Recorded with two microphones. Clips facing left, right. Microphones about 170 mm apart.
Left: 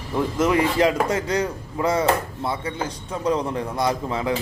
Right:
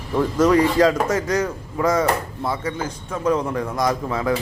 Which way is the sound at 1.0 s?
30° left (ahead or behind).